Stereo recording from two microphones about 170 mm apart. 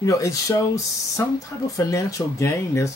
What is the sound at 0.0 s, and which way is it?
Speech, 20° left (ahead or behind).